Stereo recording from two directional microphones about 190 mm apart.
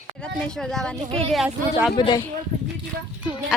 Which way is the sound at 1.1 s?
30° right (ahead or behind).